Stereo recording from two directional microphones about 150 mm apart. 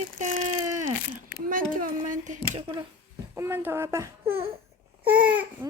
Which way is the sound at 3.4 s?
15° right (ahead or behind).